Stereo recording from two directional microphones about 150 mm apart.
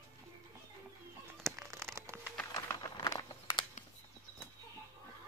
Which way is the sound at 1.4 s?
15° right (ahead or behind).